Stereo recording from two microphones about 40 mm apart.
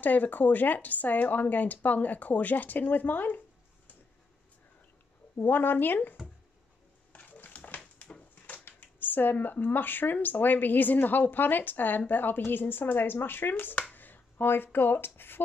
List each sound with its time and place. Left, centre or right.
0.0 s speech: left
5.4 s speech: left
7.2 s a sound: left
8.6 s speech: left